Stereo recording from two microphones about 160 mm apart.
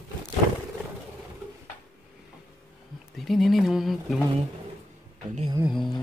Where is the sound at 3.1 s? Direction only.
Centre (ahead or behind).